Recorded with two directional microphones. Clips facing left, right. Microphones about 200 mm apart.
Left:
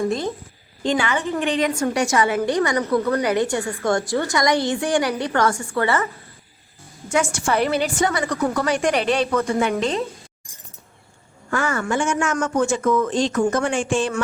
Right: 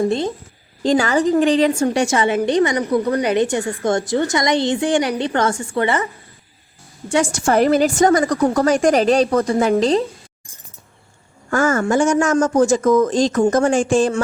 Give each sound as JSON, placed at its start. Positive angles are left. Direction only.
{"t": 0.0, "sound": "a woman's voice", "side_deg": -30}
{"t": 7.1, "sound": "a woman's voice", "side_deg": -35}
{"t": 11.5, "sound": "a woman's voice", "side_deg": -40}